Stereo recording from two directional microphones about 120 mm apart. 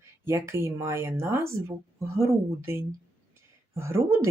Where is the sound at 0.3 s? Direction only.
20° right (ahead or behind).